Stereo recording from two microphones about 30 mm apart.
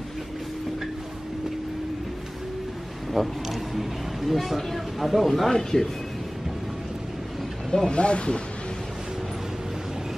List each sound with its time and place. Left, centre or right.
3.1 s a sound: centre
5.5 s speech: centre
7.8 s speech: left